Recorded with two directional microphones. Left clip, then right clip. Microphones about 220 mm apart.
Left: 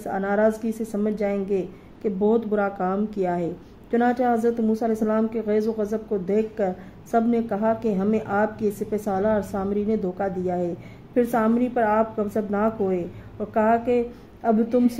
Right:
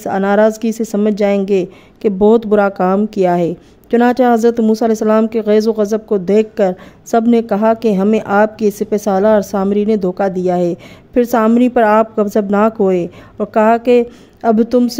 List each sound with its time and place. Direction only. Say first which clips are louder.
0.0 s a woman's voice: right 10 dB; 35° right (ahead or behind)